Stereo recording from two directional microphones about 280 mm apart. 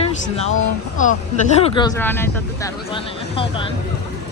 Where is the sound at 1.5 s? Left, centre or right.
Centre.